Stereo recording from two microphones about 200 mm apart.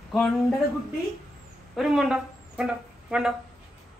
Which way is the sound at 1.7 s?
Centre (ahead or behind).